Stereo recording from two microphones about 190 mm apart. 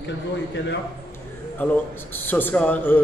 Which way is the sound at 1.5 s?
10° left (ahead or behind).